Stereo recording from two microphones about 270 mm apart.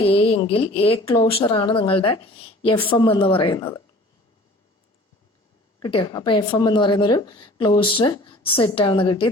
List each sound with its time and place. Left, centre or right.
0.0 s speech: left
5.8 s speech: centre